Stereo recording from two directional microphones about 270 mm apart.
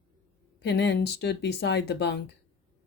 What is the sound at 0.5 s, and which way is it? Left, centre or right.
A woman's voice, left.